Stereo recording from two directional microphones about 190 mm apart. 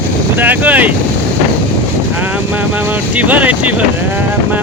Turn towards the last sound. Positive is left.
turn(degrees=-5)  # may be behind; listen again after turning